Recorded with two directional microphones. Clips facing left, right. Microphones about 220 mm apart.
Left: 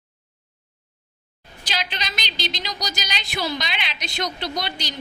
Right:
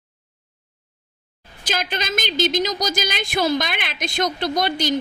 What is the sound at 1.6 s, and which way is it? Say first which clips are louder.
A woman's voice: right 5 dB; 50° right (ahead or behind).